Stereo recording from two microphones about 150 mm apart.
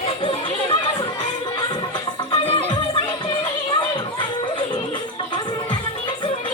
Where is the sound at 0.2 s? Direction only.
35° left (ahead or behind).